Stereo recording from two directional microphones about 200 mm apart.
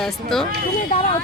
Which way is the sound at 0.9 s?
35° left (ahead or behind).